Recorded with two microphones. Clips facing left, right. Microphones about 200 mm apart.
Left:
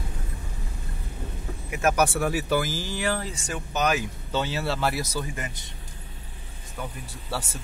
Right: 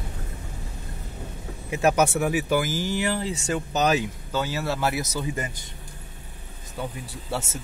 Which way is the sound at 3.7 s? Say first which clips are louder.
Right 2 dB; 30° right (ahead or behind).